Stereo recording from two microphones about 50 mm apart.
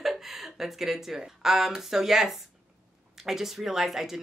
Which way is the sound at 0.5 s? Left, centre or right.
Centre.